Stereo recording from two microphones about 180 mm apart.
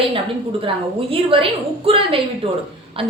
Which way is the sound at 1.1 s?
30° right (ahead or behind).